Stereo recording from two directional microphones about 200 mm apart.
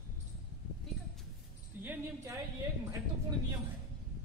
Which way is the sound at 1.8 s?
10° right (ahead or behind).